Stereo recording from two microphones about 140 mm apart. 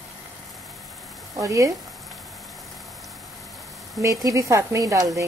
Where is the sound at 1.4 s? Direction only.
25° right (ahead or behind).